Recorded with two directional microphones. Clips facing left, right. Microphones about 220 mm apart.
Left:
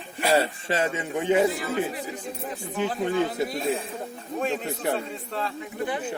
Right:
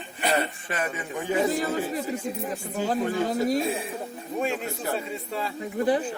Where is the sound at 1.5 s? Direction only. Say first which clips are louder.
Right 1 dB; 40° right (ahead or behind).